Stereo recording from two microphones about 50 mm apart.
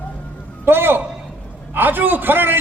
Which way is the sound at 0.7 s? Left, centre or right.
Right.